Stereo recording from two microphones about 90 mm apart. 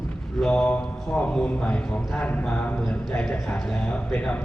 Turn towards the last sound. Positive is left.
turn(degrees=15)  # may be behind; listen again after turning